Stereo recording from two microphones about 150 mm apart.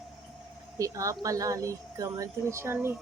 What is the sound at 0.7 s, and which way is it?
Speech, 20° right (ahead or behind).